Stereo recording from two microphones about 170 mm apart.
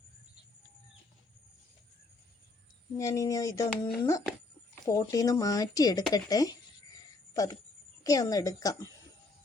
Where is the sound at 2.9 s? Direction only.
15° left (ahead or behind).